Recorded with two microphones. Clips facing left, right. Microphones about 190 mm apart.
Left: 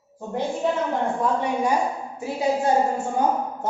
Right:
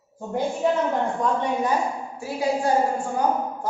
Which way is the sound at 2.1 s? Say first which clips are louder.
Left 1 dB; 20° left (ahead or behind).